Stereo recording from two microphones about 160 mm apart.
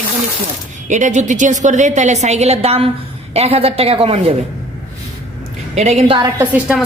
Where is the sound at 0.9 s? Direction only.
50° right (ahead or behind).